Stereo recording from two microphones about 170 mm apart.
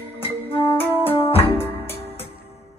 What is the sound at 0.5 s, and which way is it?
Music, 30° left (ahead or behind).